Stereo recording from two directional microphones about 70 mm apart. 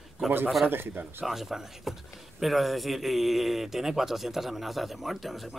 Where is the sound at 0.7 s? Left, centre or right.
Right.